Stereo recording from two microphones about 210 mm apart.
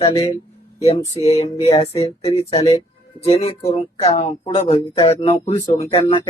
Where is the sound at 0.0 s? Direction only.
25° left (ahead or behind).